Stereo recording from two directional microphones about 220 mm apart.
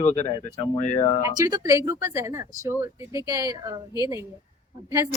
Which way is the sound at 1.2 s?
15° right (ahead or behind).